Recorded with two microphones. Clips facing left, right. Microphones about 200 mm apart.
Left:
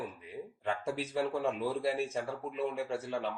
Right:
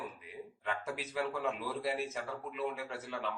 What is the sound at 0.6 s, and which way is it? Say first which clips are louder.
Speech: left 4 dB; 30° left (ahead or behind).